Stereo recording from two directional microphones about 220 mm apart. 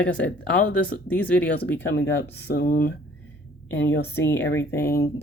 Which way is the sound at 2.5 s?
45° left (ahead or behind).